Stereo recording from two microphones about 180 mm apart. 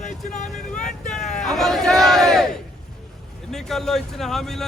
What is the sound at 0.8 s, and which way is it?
Vehicle, 5° left (ahead or behind).